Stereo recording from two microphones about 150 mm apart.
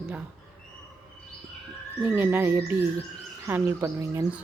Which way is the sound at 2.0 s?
15° right (ahead or behind).